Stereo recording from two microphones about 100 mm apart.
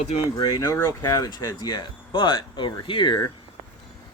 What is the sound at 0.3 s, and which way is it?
Speech, 45° left (ahead or behind).